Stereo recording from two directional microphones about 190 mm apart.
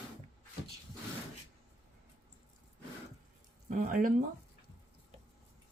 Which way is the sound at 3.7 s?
45° right (ahead or behind).